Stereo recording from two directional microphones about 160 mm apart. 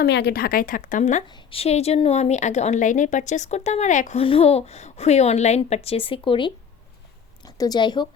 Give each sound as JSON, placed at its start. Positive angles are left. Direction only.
{"t": 0.0, "sound": "speech", "side_deg": 90}
{"t": 1.3, "sound": "a woman's voice", "side_deg": 30}
{"t": 4.2, "sound": "a woman's voice", "side_deg": 35}